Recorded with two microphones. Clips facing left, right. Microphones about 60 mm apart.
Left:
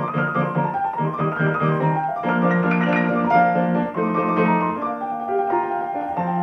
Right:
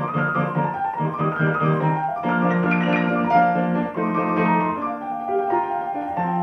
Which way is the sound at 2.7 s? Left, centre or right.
Left.